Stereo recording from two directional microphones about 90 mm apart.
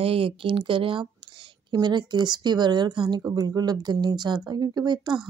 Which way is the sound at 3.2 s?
45° right (ahead or behind).